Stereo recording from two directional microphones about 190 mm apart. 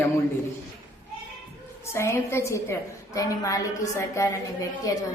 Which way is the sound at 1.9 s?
15° left (ahead or behind).